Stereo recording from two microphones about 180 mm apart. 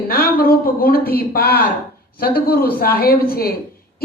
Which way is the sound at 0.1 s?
55° left (ahead or behind).